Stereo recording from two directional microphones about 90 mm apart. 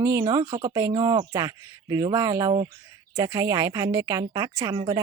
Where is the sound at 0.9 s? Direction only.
50° right (ahead or behind).